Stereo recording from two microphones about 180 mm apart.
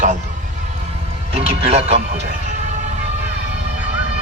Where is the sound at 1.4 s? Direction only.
35° right (ahead or behind).